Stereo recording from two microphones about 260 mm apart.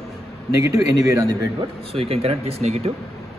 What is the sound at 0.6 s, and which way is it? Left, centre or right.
Speech, left.